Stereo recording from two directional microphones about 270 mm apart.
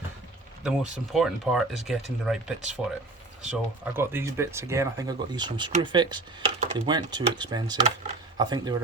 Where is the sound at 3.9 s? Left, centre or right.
Centre.